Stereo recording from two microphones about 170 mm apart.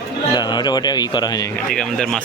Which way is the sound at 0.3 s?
25° left (ahead or behind).